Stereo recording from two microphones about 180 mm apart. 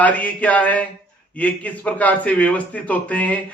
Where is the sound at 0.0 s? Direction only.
10° left (ahead or behind).